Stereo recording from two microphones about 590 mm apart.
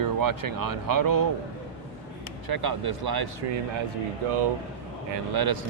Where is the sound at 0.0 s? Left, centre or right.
Right.